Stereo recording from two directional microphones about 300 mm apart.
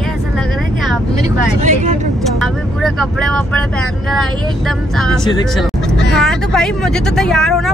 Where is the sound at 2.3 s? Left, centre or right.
Centre.